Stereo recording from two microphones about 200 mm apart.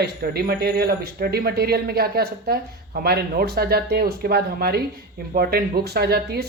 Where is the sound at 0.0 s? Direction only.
50° right (ahead or behind).